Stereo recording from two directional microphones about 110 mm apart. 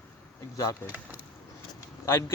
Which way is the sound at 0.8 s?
15° right (ahead or behind).